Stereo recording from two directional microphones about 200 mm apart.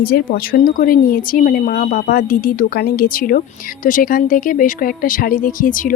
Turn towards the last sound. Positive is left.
turn(degrees=40)  # may be behind; listen again after turning